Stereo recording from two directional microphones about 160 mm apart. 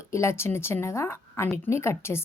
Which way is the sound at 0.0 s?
15° left (ahead or behind).